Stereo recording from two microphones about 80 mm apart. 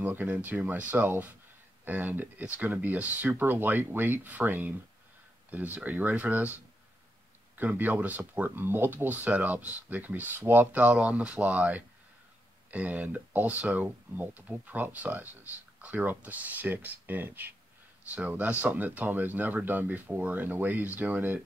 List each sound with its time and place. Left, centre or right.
0.0 s speech: right
7.5 s speech: right